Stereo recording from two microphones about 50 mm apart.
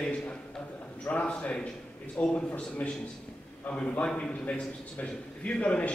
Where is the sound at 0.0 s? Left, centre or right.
Left.